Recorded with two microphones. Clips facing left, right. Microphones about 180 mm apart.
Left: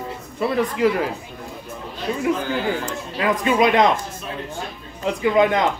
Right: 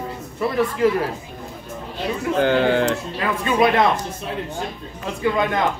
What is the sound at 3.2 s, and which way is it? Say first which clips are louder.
Speech: left 1 dB; 15° left (ahead or behind).